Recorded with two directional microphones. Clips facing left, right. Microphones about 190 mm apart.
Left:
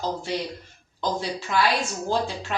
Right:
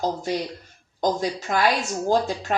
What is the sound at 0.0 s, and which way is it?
A woman's voice, 40° right (ahead or behind).